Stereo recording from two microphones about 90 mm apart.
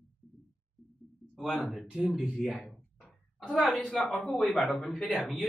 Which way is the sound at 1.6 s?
5° right (ahead or behind).